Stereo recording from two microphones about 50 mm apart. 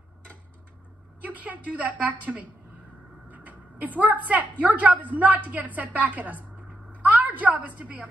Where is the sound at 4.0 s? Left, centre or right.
Right.